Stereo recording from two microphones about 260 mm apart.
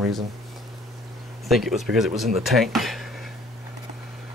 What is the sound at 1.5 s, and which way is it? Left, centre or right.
Speech, centre.